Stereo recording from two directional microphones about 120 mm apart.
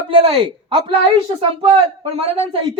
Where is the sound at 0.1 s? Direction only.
50° right (ahead or behind).